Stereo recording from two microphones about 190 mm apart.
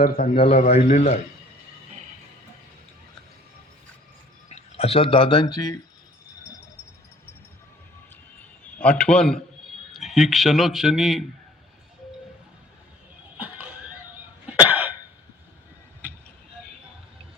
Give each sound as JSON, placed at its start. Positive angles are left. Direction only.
{"t": 0.0, "sound": "a man's voice", "side_deg": 50}
{"t": 0.3, "sound": "speech", "side_deg": 30}
{"t": 4.4, "sound": "speech", "side_deg": 35}
{"t": 8.8, "sound": "speech", "side_deg": 5}
{"t": 14.6, "sound": "cough", "side_deg": -10}